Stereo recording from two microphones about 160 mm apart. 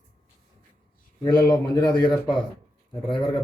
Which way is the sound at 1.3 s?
25° left (ahead or behind).